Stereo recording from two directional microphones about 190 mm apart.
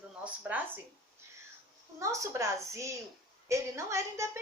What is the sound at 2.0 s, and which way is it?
A woman's voice, 15° right (ahead or behind).